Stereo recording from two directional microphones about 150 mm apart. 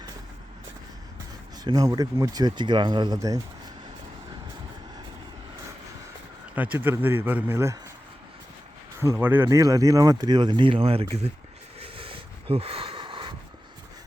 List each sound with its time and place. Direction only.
1.6 s speech: 25° right (ahead or behind)
6.6 s a man's voice: 10° right (ahead or behind)
9.1 s speech: 15° right (ahead or behind); by 11.3 s 40° right (ahead or behind)
11.8 s a sound: 35° right (ahead or behind)